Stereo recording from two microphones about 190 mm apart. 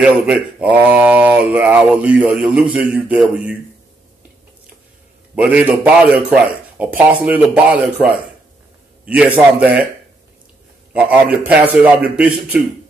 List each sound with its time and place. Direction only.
0.0 s speech: 5° right (ahead or behind)
5.3 s speech: 5° right (ahead or behind)
10.9 s speech: 5° right (ahead or behind)